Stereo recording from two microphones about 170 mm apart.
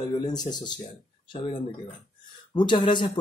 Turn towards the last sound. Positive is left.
turn(degrees=30)  # may be behind; listen again after turning